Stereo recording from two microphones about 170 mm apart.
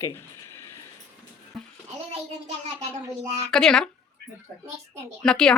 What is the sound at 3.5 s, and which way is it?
Speech, 5° left (ahead or behind).